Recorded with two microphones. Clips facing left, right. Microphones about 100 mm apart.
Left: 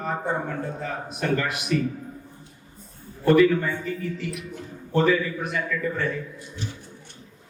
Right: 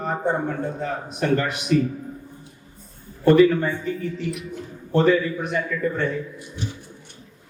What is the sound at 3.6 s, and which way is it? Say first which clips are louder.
A man's voice: right 2 dB; centre (ahead or behind).